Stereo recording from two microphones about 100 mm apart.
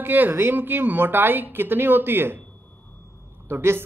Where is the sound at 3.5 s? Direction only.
25° right (ahead or behind).